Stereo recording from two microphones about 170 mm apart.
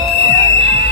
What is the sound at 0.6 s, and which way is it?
Music, 85° left.